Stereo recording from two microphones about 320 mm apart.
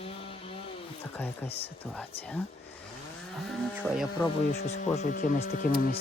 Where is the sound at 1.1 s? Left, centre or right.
Centre.